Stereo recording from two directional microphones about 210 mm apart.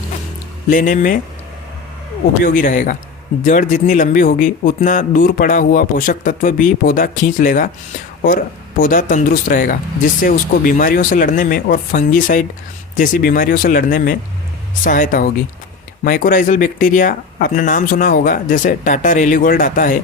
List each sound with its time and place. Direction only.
0.7 s speech: 40° left (ahead or behind)
2.4 s speech: 40° left (ahead or behind)